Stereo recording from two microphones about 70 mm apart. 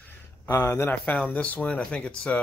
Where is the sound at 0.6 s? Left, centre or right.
Left.